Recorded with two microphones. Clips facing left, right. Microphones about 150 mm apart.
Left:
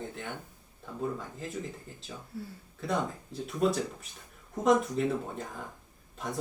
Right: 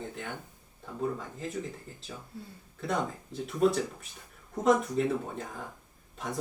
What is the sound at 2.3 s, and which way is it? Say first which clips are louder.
Speech: left 7 dB; 20° right (ahead or behind).